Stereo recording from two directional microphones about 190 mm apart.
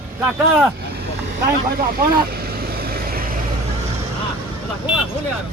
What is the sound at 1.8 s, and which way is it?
Vehicle, 50° right (ahead or behind).